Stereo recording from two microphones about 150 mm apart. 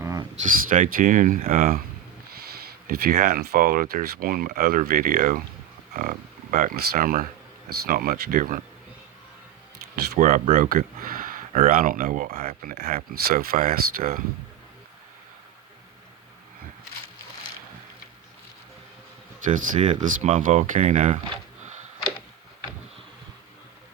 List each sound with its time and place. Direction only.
0.0 s a sound: 25° right (ahead or behind)
0.7 s speech: 65° right (ahead or behind)
2.3 s speech: 85° right; by 8.6 s 65° right (ahead or behind)
9.9 s speech: 65° right (ahead or behind)
12.6 s speech: 85° right
19.5 s speech: 55° right (ahead or behind)